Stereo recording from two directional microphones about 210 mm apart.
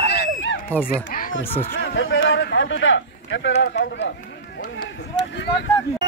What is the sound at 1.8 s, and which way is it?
Speech, 65° left (ahead or behind).